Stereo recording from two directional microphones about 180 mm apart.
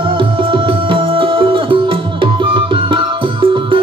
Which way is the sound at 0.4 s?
30° right (ahead or behind).